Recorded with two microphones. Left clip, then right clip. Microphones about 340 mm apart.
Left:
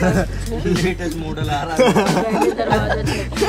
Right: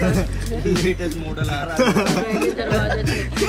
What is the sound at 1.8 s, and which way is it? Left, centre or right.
Speech, centre.